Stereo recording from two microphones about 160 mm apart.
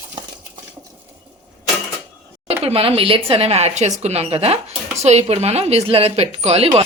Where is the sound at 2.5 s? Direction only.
40° right (ahead or behind).